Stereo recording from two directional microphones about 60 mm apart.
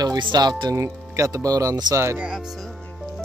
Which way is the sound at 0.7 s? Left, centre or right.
Right.